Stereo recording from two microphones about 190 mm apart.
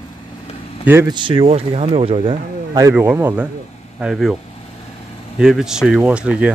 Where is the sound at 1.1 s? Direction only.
25° right (ahead or behind).